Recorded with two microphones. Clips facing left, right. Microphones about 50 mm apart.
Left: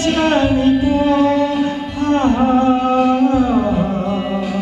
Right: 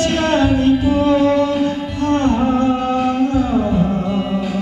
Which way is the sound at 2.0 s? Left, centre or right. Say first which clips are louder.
Left 1 dB; left.